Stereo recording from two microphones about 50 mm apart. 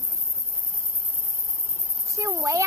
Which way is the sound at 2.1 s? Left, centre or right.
Right.